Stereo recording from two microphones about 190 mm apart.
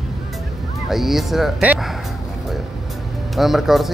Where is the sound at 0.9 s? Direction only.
Centre (ahead or behind).